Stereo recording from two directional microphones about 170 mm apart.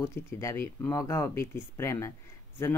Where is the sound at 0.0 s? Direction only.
15° left (ahead or behind).